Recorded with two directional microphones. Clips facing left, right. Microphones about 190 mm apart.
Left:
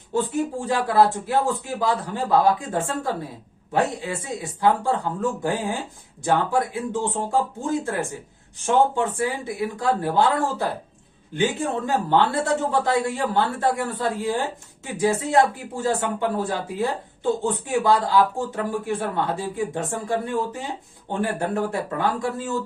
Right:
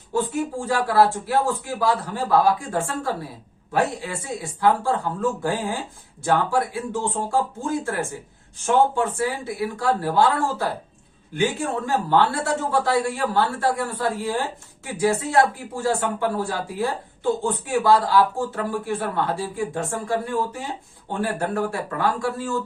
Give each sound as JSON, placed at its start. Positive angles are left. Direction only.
{"t": 0.1, "sound": "speech", "side_deg": 20}